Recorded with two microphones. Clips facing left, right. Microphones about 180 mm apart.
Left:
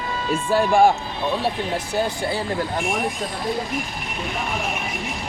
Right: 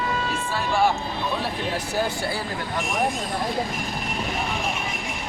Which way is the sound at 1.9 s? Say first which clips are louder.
Left 4 dB; 20° left (ahead or behind).